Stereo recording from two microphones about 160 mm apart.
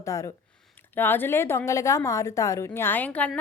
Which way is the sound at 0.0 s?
20° left (ahead or behind).